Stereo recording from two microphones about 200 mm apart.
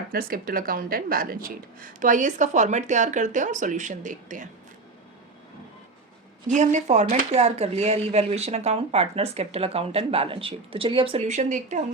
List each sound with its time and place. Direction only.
0.1 s speech: 45° right (ahead or behind)
6.5 s speech: 35° right (ahead or behind)